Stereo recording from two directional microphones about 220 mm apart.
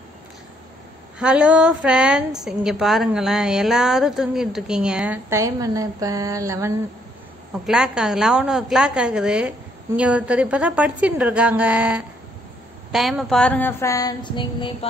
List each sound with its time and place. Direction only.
1.2 s a woman's voice: 5° right (ahead or behind)
7.6 s a woman's voice: centre (ahead or behind)
12.9 s a sound: centre (ahead or behind); by 14.9 s 20° left (ahead or behind)